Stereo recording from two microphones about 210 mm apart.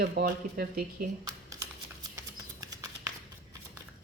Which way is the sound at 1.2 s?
15° right (ahead or behind).